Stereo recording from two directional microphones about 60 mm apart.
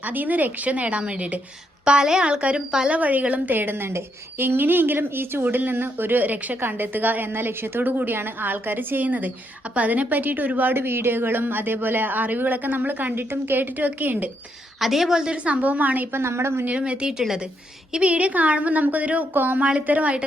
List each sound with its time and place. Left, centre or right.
0.0 s a woman's voice: right; by 2.9 s centre
2.9 s a woman's voice: right
14.8 s a woman's voice: centre; by 16.0 s right
16.1 s a woman's voice: right
16.6 s a woman's voice: centre
17.9 s a woman's voice: right